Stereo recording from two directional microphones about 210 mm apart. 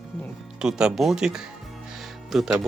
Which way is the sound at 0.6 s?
5° right (ahead or behind).